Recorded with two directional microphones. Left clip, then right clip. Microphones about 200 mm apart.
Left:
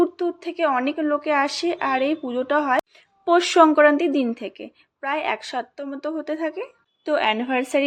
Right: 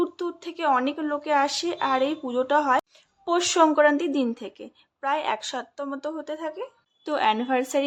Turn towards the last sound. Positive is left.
turn(degrees=5)  # may be behind; listen again after turning